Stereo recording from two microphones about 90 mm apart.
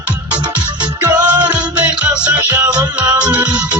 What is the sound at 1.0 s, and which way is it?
Music, 35° right (ahead or behind).